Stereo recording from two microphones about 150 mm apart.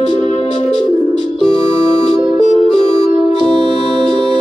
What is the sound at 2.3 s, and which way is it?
Music, 50° left (ahead or behind).